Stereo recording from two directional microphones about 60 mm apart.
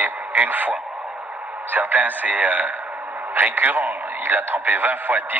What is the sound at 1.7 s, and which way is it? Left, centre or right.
A man's voice, right.